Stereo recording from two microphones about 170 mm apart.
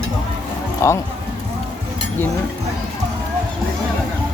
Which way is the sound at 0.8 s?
15° left (ahead or behind).